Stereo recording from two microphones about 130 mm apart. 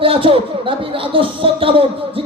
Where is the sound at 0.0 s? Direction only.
45° right (ahead or behind).